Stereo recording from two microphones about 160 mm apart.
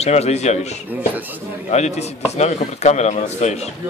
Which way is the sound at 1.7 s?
45° left (ahead or behind).